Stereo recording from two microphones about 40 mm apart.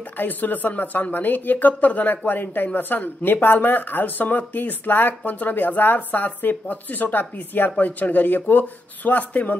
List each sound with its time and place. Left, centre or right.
0.2 s speech: left